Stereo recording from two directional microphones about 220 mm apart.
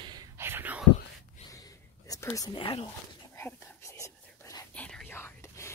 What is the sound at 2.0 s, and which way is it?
Speech, 15° left (ahead or behind).